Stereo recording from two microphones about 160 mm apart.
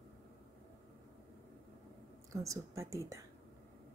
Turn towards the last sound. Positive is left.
turn(degrees=-20)  # may be behind; listen again after turning